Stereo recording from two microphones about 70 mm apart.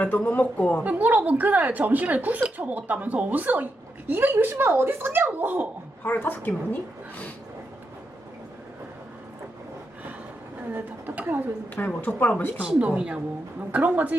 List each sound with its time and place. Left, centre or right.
0.3 s speech: left
0.9 s a woman's voice: right
6.0 s speech: left
10.8 s a woman's voice: right
11.7 s speech: left
12.5 s a woman's voice: centre